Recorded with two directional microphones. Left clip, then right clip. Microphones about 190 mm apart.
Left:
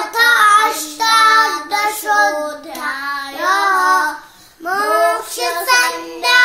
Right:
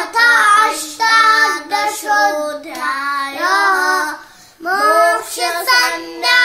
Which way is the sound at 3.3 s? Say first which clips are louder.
Even; centre (ahead or behind).